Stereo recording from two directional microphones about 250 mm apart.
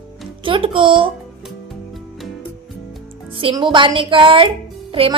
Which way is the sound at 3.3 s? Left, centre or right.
Centre.